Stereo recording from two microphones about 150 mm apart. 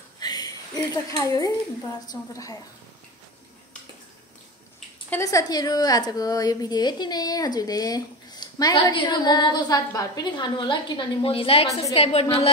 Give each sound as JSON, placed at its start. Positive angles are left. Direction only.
{"t": 0.2, "sound": "a sound", "side_deg": 25}
{"t": 0.9, "sound": "a woman's voice", "side_deg": 25}
{"t": 5.1, "sound": "a woman's voice", "side_deg": 20}